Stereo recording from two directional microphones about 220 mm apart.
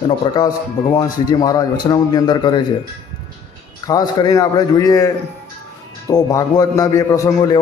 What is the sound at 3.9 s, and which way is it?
A man's voice, 15° left (ahead or behind).